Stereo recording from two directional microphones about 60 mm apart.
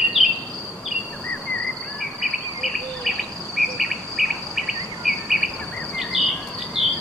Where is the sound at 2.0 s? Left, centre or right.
Centre.